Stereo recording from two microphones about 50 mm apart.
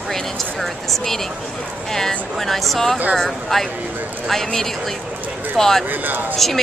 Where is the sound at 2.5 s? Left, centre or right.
Centre.